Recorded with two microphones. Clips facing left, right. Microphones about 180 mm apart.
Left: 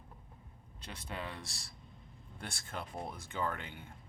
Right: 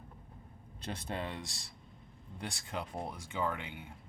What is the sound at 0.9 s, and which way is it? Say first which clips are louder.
Speech: right 4 dB; 40° right (ahead or behind).